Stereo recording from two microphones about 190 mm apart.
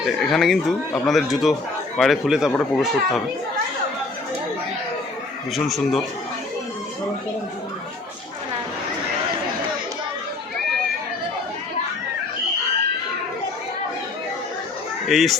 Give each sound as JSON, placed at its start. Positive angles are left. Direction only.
{"t": 0.2, "sound": "speech", "side_deg": 0}
{"t": 5.5, "sound": "speech", "side_deg": 0}
{"t": 15.1, "sound": "speech", "side_deg": 0}